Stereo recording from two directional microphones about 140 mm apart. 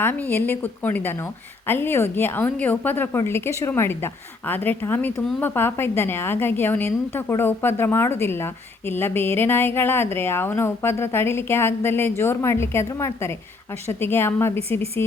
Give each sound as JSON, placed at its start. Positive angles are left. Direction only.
{"t": 0.0, "sound": "speech", "side_deg": 15}